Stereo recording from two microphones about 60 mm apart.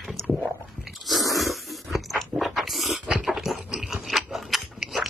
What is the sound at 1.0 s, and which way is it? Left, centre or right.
Crunch, centre.